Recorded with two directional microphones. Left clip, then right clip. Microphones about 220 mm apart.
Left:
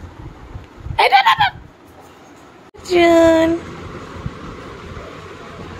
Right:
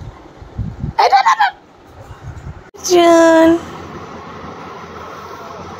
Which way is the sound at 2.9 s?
10° right (ahead or behind).